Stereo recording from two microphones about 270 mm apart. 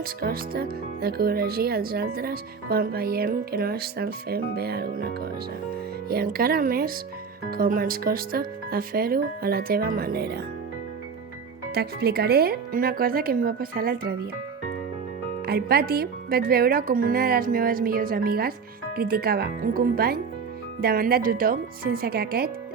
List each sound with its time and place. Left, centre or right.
0.0 s speech: right
11.7 s speech: right
15.4 s speech: right